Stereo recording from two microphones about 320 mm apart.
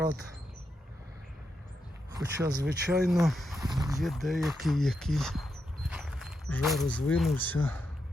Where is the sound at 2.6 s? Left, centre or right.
Right.